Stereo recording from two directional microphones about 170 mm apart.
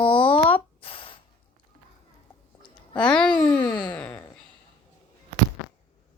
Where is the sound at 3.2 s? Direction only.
25° left (ahead or behind).